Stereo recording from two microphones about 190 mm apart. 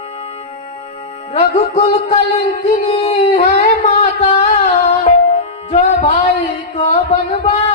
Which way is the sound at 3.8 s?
35° left (ahead or behind).